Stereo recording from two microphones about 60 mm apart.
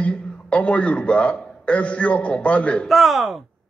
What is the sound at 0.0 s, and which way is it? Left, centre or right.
A man's voice, centre.